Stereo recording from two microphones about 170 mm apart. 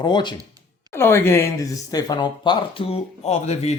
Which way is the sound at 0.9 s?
15° left (ahead or behind).